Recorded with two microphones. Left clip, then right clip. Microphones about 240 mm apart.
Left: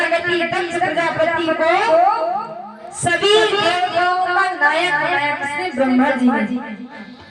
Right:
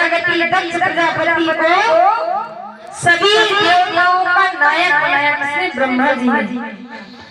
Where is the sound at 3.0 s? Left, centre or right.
Right.